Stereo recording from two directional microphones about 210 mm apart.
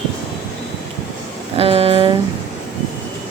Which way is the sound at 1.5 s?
30° right (ahead or behind).